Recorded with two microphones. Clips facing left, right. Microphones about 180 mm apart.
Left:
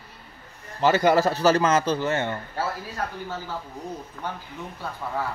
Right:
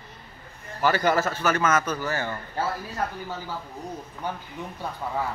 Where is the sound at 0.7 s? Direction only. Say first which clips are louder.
Left 3 dB; 20° left (ahead or behind).